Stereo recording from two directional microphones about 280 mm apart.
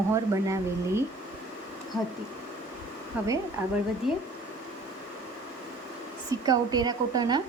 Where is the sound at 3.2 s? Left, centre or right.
Centre.